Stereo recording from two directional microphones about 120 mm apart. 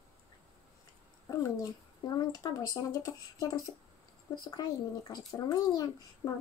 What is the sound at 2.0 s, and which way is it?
Speech, 35° left (ahead or behind).